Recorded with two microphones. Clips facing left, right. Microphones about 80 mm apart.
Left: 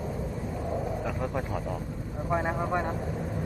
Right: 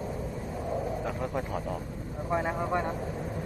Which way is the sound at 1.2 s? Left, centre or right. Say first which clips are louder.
Left 1 dB; centre.